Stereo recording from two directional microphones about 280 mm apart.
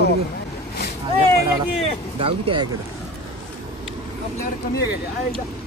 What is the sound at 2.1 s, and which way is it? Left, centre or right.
Speech, centre.